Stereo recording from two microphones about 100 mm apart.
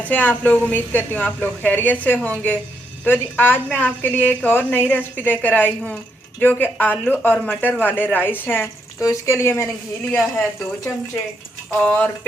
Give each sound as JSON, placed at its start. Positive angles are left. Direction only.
{"t": 0.0, "sound": "a woman's voice", "side_deg": 15}
{"t": 9.0, "sound": "a woman's voice", "side_deg": 30}
{"t": 11.8, "sound": "a woman's voice", "side_deg": 15}